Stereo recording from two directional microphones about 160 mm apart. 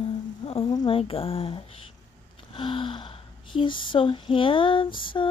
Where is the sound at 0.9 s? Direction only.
35° left (ahead or behind).